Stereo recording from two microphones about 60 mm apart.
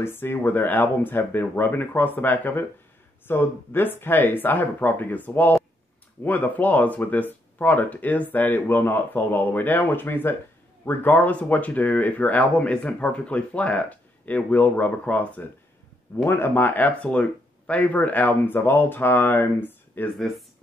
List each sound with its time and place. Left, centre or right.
0.0 s speech: left
16.3 s speech: left
20.2 s speech: centre